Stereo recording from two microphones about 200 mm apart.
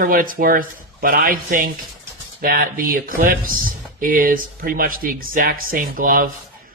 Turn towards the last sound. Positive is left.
turn(degrees=-45)  # may be behind; listen again after turning